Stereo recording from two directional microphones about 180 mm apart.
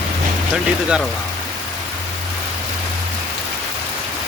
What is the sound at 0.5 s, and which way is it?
Speech, 5° right (ahead or behind).